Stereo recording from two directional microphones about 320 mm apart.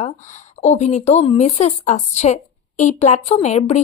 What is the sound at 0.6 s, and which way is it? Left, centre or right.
Speech, left.